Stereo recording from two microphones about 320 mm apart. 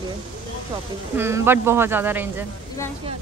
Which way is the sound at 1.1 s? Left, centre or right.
Centre.